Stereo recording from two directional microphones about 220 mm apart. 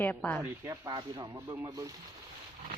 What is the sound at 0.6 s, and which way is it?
Speech, 15° right (ahead or behind).